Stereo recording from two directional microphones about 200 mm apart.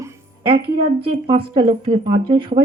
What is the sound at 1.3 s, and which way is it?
Speech, 25° right (ahead or behind).